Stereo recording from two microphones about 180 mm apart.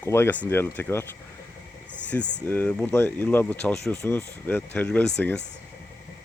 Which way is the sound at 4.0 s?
15° left (ahead or behind).